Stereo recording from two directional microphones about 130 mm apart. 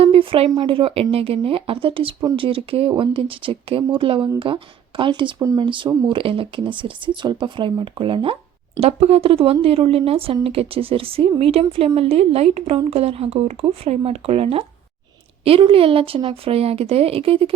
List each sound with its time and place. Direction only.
0.0 s a sound: 45° right (ahead or behind)
0.5 s speech: 40° right (ahead or behind)
5.4 s speech: 25° right (ahead or behind)
5.6 s speech: 40° right (ahead or behind)
8.8 s speech: 55° right (ahead or behind)